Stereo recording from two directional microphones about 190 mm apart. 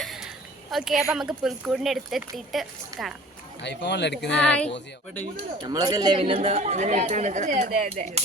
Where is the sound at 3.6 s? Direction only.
65° left (ahead or behind).